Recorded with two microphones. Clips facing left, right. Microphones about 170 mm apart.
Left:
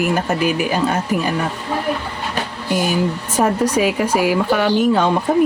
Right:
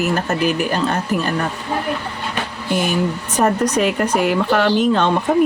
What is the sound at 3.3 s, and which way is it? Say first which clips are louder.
Speech: even; 10° left (ahead or behind).